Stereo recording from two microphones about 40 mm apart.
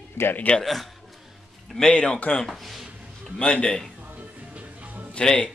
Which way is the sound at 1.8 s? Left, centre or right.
Left.